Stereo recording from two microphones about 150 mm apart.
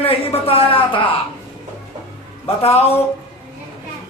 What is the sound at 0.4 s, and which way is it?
Speech, 40° left (ahead or behind).